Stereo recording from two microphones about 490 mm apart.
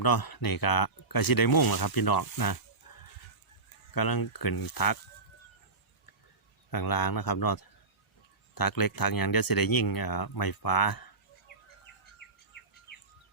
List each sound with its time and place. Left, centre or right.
0.0 s speech: left
2.8 s a sound: left
3.9 s speech: left
6.7 s speech: left